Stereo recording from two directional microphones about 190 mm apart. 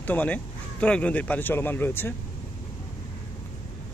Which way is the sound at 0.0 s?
10° left (ahead or behind).